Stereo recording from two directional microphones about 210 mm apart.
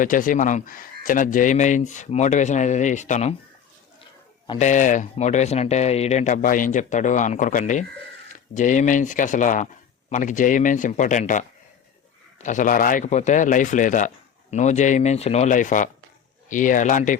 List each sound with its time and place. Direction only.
0.0 s speech: 40° left (ahead or behind)
4.4 s speech: 30° left (ahead or behind)